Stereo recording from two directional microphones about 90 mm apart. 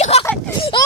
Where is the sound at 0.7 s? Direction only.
60° left (ahead or behind).